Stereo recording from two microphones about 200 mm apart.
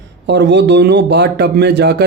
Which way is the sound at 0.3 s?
60° right (ahead or behind).